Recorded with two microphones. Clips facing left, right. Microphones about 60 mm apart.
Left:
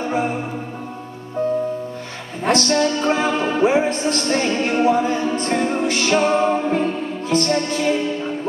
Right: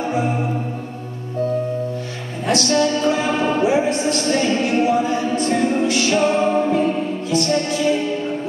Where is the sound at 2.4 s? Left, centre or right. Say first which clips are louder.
Even; left.